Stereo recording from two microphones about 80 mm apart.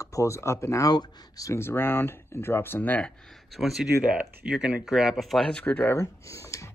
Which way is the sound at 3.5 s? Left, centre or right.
Centre.